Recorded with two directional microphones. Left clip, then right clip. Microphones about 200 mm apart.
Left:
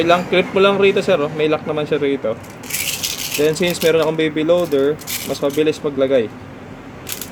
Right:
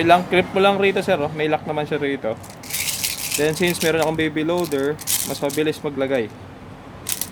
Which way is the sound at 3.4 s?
20° right (ahead or behind).